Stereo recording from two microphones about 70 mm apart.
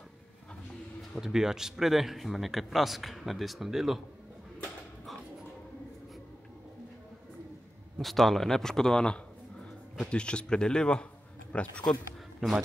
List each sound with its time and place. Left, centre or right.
1.2 s a man's voice: centre
8.0 s a man's voice: centre
12.4 s a man's voice: centre